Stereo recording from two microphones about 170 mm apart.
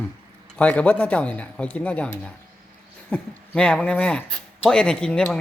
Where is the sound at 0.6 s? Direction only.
10° left (ahead or behind).